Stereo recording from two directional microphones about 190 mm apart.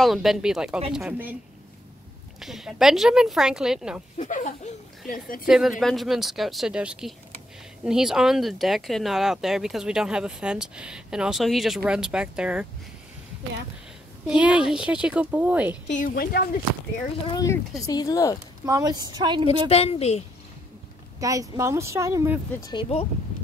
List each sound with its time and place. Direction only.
0.0 s speech: centre (ahead or behind)
2.4 s speech: centre (ahead or behind)
4.2 s a woman's voice: 40° left (ahead or behind)
5.5 s speech: centre (ahead or behind)
14.2 s speech: 5° right (ahead or behind)
15.9 s a woman's voice: 45° left (ahead or behind)
17.3 s speech: 15° left (ahead or behind)
18.7 s speech: 20° right (ahead or behind)
19.7 s a woman's voice: 30° left (ahead or behind)
21.2 s speech: 15° right (ahead or behind)
22.6 s speech: 25° left (ahead or behind)